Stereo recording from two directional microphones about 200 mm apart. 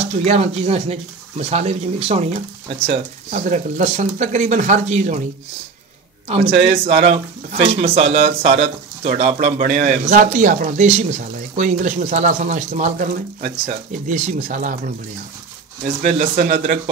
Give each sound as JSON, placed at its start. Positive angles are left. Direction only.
{"t": 0.0, "sound": "speech", "side_deg": -30}
{"t": 6.2, "sound": "speech", "side_deg": -30}
{"t": 16.0, "sound": "speech", "side_deg": -40}